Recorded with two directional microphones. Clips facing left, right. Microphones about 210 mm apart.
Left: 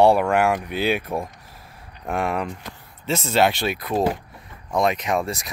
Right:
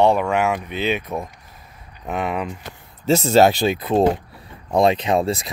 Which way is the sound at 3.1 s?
40° right (ahead or behind).